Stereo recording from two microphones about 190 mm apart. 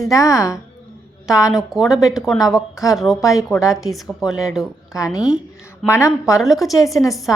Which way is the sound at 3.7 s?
Centre (ahead or behind).